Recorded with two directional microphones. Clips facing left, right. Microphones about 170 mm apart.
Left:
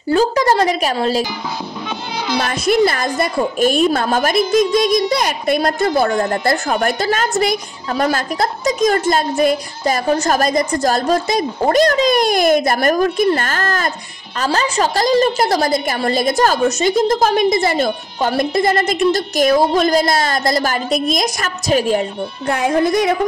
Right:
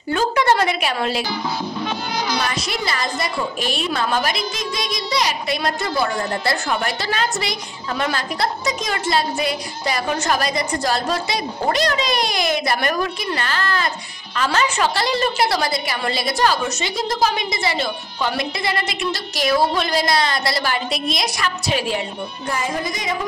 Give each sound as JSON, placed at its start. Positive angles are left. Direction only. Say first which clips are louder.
{"t": 0.1, "sound": "a woman's voice", "louder": "left 4 dB", "side_deg": 35}
{"t": 2.3, "sound": "a woman's voice", "louder": "left 8 dB", "side_deg": 50}
{"t": 22.5, "sound": "speech", "louder": "left 10 dB", "side_deg": 60}